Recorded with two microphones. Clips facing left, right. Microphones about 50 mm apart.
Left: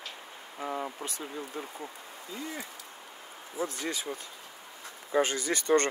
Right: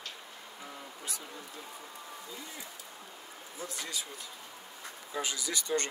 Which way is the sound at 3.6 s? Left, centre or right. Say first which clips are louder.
Left 7 dB; left.